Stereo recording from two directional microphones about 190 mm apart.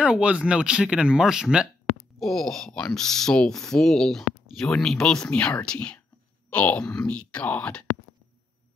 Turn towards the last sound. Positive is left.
turn(degrees=5)  # may be behind; listen again after turning